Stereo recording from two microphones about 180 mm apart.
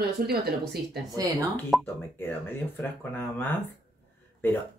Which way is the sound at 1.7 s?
10° left (ahead or behind).